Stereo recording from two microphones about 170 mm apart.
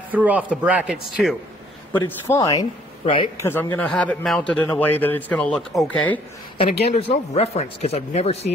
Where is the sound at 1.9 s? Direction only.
10° left (ahead or behind).